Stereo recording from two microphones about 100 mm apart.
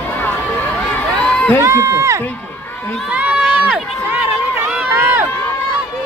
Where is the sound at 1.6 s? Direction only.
30° right (ahead or behind).